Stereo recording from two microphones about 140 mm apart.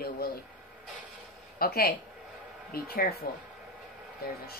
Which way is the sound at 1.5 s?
90° left.